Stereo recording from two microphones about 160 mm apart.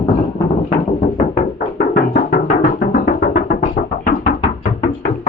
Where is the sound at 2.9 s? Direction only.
60° left (ahead or behind).